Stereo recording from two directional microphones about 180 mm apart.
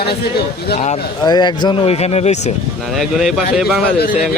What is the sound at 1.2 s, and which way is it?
Speech, 25° left (ahead or behind).